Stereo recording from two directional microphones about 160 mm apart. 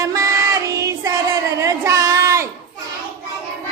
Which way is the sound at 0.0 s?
20° right (ahead or behind).